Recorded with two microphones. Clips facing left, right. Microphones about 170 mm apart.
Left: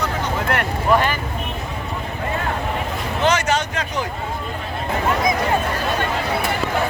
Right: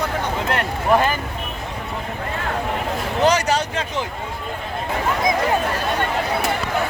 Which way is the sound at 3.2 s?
35° right (ahead or behind).